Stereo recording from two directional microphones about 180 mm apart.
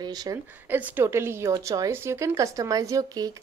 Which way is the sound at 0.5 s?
10° right (ahead or behind).